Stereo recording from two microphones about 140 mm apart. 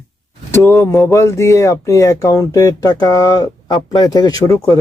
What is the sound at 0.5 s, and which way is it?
Speech, 20° left (ahead or behind).